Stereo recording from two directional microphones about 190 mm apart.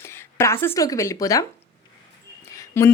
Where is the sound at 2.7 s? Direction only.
15° left (ahead or behind).